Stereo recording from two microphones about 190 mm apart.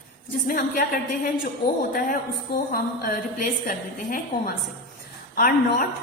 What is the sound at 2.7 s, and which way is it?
A woman's voice, 50° left (ahead or behind).